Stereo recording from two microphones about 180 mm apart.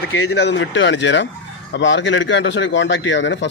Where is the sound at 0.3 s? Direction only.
75° left (ahead or behind).